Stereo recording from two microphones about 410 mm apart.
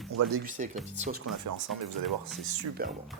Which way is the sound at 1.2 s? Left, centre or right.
Right.